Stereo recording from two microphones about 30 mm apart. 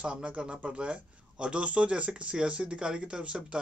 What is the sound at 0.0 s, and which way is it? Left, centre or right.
Speech, right.